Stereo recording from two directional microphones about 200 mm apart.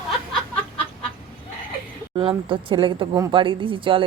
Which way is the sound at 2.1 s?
25° right (ahead or behind).